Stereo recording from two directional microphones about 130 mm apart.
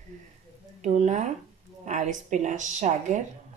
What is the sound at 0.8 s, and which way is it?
Speech, 65° right (ahead or behind).